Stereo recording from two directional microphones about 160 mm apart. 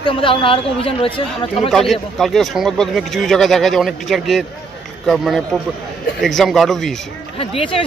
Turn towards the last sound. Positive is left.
turn(degrees=35)  # may be behind; listen again after turning